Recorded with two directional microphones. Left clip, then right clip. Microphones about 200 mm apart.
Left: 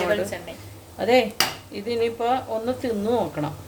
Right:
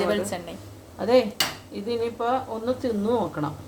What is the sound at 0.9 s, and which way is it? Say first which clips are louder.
Speech: left 1 dB; 15° left (ahead or behind).